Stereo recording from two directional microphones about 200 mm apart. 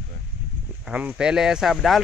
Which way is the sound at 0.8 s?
5° right (ahead or behind).